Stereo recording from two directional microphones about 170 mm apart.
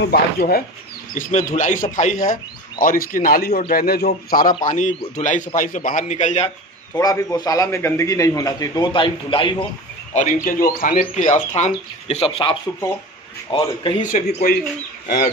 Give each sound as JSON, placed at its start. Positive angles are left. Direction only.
{"t": 0.0, "sound": "a man's voice", "side_deg": 65}
{"t": 1.1, "sound": "a man's voice", "side_deg": 50}
{"t": 4.6, "sound": "speech", "side_deg": 45}
{"t": 6.9, "sound": "a man's voice", "side_deg": 20}
{"t": 10.1, "sound": "a man's voice", "side_deg": 50}
{"t": 14.1, "sound": "a man's voice", "side_deg": 60}